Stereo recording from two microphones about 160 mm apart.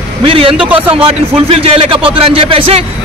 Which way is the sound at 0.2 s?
35° right (ahead or behind).